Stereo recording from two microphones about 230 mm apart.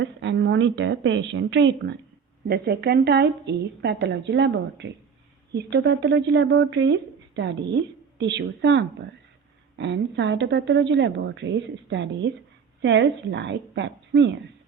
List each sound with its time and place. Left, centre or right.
0.0 s speech: right